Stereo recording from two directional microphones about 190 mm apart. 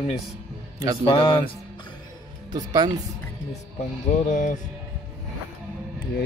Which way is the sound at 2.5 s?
20° right (ahead or behind).